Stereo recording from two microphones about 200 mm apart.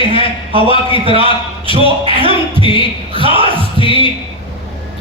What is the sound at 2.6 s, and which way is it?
Speech, 25° left (ahead or behind).